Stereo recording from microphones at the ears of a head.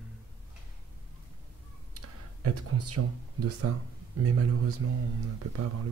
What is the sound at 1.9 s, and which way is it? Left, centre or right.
Speech, right.